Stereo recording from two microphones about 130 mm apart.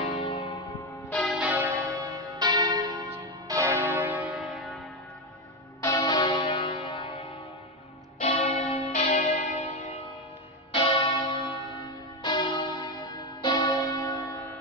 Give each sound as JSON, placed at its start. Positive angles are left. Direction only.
{"t": 0.0, "sound": "church bell", "side_deg": 50}
{"t": 1.1, "sound": "change ringing", "side_deg": 0}
{"t": 1.4, "sound": "change ringing", "side_deg": -10}
{"t": 1.9, "sound": "church bell", "side_deg": -30}
{"t": 5.8, "sound": "church bell", "side_deg": 25}
{"t": 8.2, "sound": "church bell", "side_deg": 60}
{"t": 9.0, "sound": "church bell", "side_deg": 65}
{"t": 10.7, "sound": "church bell", "side_deg": 45}